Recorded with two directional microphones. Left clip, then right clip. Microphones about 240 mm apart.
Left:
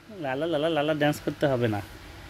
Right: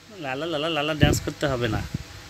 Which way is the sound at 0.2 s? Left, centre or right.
Centre.